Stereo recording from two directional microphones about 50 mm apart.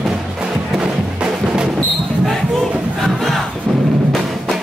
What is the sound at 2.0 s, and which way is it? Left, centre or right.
Basketball bounce, centre.